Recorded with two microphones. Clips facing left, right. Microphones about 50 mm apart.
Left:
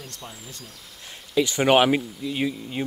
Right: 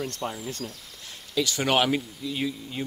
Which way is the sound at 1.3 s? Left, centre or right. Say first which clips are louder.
Left 5 dB; left.